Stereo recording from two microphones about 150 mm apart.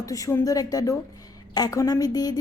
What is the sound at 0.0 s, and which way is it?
A woman's voice, 20° left (ahead or behind).